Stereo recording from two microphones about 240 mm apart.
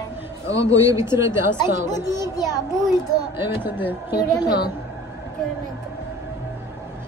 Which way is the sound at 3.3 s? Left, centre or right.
Centre.